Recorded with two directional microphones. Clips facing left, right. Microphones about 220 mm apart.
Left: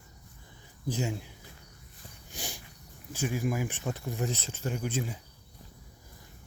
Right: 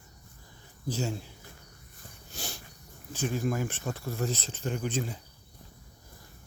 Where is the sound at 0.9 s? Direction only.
15° left (ahead or behind).